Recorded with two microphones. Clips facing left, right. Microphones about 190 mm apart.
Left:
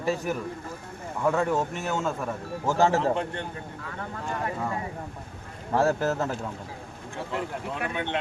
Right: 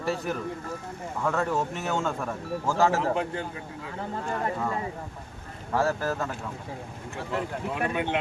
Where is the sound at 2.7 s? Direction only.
25° left (ahead or behind).